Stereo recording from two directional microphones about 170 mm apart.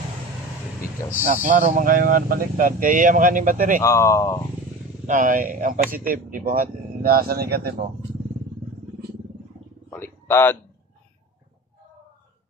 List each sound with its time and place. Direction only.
1.5 s speech: 50° right (ahead or behind)
3.8 s speech: 15° left (ahead or behind)
5.0 s speech: 50° right (ahead or behind)
9.8 s wild animals: 15° left (ahead or behind)